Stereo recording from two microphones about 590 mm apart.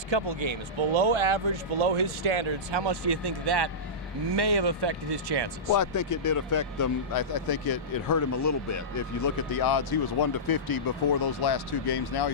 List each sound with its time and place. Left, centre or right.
0.1 s speech: right
5.7 s speech: left